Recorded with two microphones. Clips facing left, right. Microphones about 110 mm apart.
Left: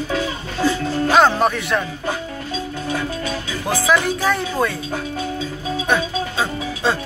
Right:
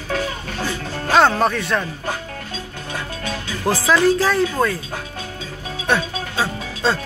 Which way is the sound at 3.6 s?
15° left (ahead or behind).